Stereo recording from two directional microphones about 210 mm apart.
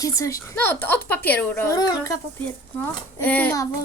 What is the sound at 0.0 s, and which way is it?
A child's voice, 15° left (ahead or behind).